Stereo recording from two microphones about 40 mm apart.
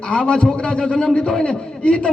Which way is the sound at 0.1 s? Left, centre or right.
Left.